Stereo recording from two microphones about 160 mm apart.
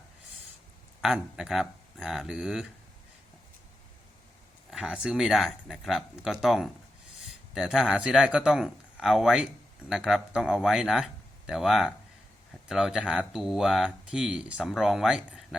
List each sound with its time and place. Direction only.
1.0 s speech: centre (ahead or behind)
4.7 s speech: centre (ahead or behind)